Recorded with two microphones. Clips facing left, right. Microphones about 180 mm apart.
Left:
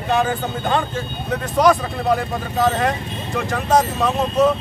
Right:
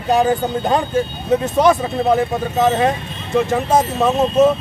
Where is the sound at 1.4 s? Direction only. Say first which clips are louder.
Left 1 dB; 25° right (ahead or behind).